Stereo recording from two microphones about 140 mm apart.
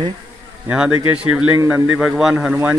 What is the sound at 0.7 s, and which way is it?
A man's voice, 5° right (ahead or behind).